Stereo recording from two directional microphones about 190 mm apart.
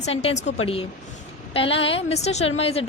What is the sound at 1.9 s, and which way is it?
Speech, 35° left (ahead or behind).